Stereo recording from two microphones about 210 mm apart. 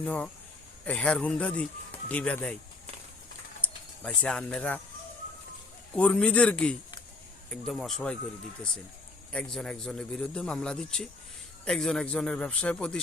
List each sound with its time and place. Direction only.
0.0 s speech: 5° left (ahead or behind)
4.0 s a man's voice: 5° left (ahead or behind)
6.0 s a man's voice: 5° left (ahead or behind)
9.3 s a man's voice: 5° left (ahead or behind)